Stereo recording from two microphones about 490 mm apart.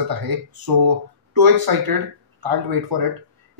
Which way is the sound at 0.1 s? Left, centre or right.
Right.